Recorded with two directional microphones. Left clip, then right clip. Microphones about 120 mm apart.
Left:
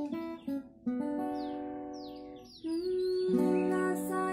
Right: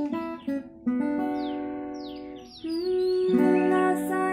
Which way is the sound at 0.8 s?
10° right (ahead or behind).